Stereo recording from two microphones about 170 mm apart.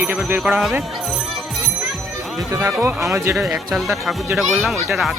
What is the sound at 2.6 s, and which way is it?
Speech, 15° right (ahead or behind).